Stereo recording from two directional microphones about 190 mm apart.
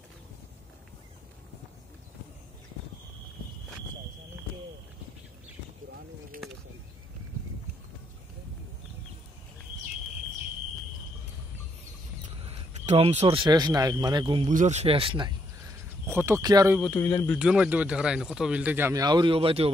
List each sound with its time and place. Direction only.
12.4 s speech: 35° right (ahead or behind)
14.5 s speech: 40° right (ahead or behind)
16.1 s speech: 15° right (ahead or behind)
16.8 s speech: 10° left (ahead or behind)
17.4 s speech: 5° right (ahead or behind); by 19.7 s 30° right (ahead or behind)